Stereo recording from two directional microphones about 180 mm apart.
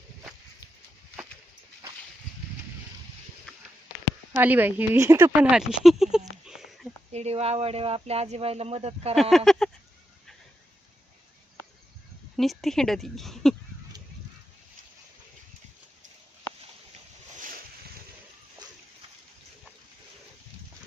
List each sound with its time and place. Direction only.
4.4 s speech: 10° right (ahead or behind)
7.1 s speech: 35° right (ahead or behind)
9.3 s speech: centre (ahead or behind)
12.4 s speech: centre (ahead or behind)